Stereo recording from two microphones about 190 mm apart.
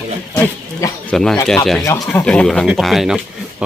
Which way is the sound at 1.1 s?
5° left (ahead or behind).